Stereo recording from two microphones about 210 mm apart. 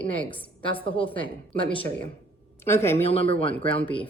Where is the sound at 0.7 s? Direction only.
25° left (ahead or behind).